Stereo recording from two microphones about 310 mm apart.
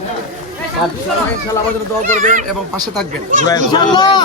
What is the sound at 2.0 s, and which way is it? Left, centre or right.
Speech, right.